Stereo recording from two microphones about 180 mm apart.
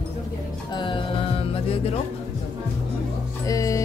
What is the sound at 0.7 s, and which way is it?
Music, 25° left (ahead or behind).